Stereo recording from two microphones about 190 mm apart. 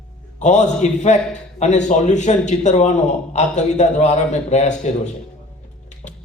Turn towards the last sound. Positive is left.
turn(degrees=40)  # may be behind; listen again after turning